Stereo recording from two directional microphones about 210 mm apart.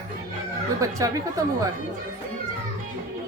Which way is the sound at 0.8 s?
15° right (ahead or behind).